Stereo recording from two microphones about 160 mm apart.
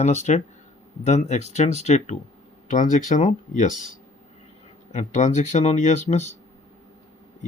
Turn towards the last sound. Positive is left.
turn(degrees=45)  # may be behind; listen again after turning